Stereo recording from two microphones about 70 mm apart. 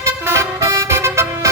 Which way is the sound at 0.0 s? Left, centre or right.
Right.